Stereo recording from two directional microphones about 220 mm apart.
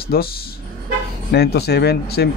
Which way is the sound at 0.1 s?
45° left (ahead or behind).